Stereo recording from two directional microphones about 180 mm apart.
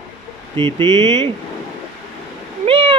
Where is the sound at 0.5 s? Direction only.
25° right (ahead or behind).